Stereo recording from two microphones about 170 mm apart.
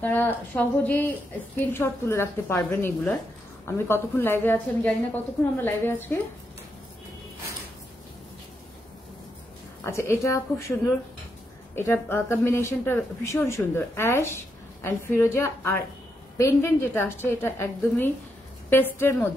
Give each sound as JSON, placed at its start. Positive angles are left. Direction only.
{"t": 0.0, "sound": "speech", "side_deg": 10}
{"t": 9.8, "sound": "speech", "side_deg": 15}
{"t": 11.7, "sound": "speech", "side_deg": 15}